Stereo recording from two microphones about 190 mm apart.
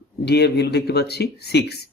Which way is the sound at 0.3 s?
60° left (ahead or behind).